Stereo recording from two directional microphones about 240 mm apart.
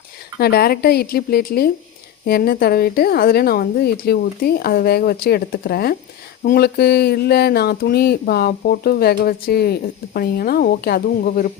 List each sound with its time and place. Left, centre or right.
0.3 s a woman's voice: left